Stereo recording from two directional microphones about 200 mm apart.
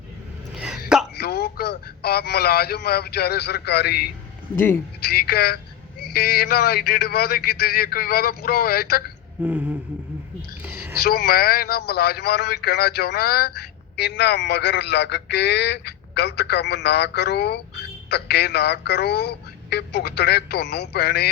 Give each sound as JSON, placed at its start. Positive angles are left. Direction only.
{"t": 0.5, "sound": "throat clearing", "side_deg": -5}
{"t": 1.1, "sound": "a man's voice", "side_deg": 50}
{"t": 4.5, "sound": "speech", "side_deg": 10}
{"t": 5.0, "sound": "a man's voice", "side_deg": 50}
{"t": 9.4, "sound": "a sound", "side_deg": -5}
{"t": 11.0, "sound": "a man's voice", "side_deg": 50}